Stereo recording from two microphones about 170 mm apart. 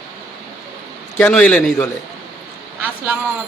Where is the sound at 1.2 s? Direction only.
5° left (ahead or behind).